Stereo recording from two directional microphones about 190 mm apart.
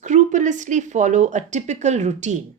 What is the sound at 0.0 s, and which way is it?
Speech, 40° right (ahead or behind).